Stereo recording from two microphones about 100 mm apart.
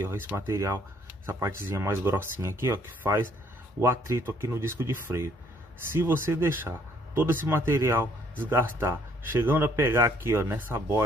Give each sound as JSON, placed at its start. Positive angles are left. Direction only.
{"t": 0.5, "sound": "speech", "side_deg": -30}